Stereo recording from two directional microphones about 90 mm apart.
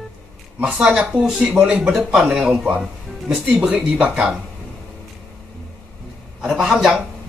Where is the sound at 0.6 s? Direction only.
10° right (ahead or behind).